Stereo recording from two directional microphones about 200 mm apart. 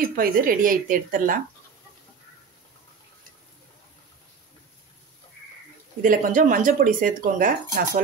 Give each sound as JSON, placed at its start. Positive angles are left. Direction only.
{"t": 0.1, "sound": "speech", "side_deg": -45}
{"t": 6.0, "sound": "speech", "side_deg": -40}